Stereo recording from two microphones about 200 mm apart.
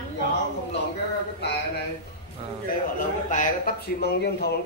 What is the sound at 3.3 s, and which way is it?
Speech, 45° left (ahead or behind).